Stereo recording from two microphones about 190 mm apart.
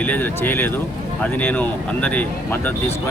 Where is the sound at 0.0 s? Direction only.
10° left (ahead or behind).